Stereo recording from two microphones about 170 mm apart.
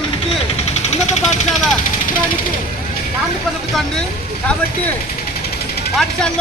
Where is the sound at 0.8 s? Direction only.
40° left (ahead or behind).